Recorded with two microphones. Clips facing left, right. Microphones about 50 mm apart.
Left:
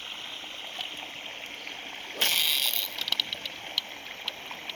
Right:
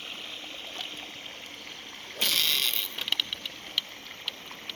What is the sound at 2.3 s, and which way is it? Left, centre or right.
Mechanisms, centre.